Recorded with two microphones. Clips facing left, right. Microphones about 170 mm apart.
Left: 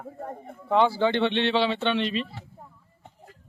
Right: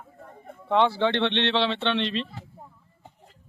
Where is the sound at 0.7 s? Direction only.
5° left (ahead or behind).